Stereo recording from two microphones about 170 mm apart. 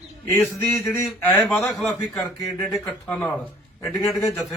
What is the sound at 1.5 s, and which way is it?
A man's voice, 5° left (ahead or behind).